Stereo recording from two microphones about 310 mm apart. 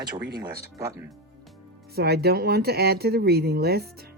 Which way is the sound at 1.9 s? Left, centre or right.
Right.